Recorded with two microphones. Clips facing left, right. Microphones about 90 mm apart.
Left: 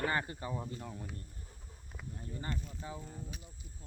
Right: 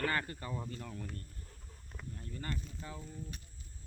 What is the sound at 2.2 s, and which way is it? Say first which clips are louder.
Speech: left 1 dB; 20° left (ahead or behind).